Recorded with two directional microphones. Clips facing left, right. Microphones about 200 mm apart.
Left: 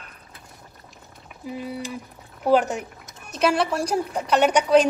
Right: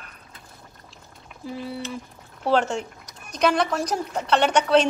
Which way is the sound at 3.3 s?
5° left (ahead or behind).